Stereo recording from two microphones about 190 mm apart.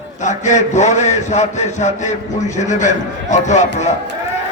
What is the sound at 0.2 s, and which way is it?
A man's voice, 40° left (ahead or behind).